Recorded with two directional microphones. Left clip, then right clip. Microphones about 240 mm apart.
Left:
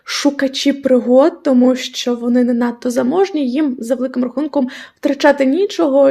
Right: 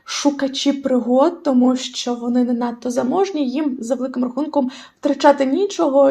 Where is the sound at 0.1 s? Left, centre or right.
Left.